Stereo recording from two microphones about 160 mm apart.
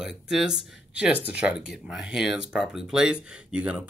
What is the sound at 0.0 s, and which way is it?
Speech, 5° right (ahead or behind).